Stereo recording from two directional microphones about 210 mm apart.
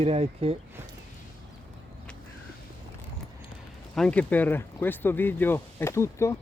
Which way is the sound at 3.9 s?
5° left (ahead or behind).